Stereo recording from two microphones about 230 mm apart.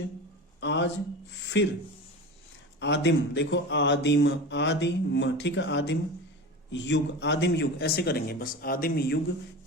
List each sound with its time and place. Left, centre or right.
0.6 s a man's voice: left
2.8 s speech: left